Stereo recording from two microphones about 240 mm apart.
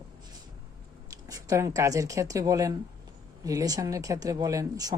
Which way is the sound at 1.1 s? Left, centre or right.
Centre.